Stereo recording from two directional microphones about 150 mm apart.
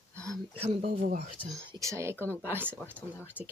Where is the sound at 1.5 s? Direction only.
20° right (ahead or behind).